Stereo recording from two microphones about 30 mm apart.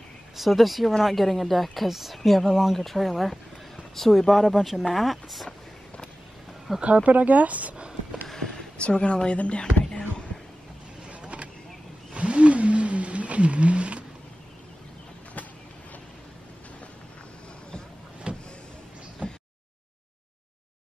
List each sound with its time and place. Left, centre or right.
0.4 s speech: centre
2.8 s speech: centre
6.8 s speech: right
8.7 s speech: left
11.1 s vehicle: right
12.1 s a sound: right
18.3 s vehicle: right
19.2 s a sound: right